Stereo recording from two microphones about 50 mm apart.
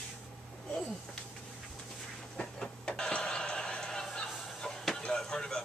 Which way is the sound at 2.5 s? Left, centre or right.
Centre.